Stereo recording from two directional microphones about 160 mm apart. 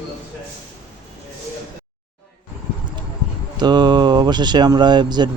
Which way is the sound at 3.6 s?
25° right (ahead or behind).